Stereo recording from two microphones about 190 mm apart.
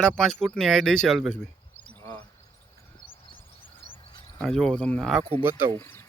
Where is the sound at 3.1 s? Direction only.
25° left (ahead or behind).